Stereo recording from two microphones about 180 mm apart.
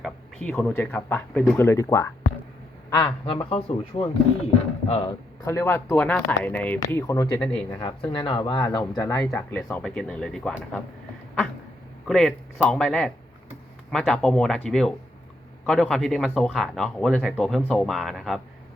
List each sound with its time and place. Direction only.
0.0 s a man's voice: 5° left (ahead or behind); by 5.1 s 30° left (ahead or behind)
5.5 s speech: 15° left (ahead or behind)
6.7 s speech: 20° left (ahead or behind)
8.1 s speech: 25° left (ahead or behind); by 10.8 s 5° left (ahead or behind)
12.0 s speech: centre (ahead or behind)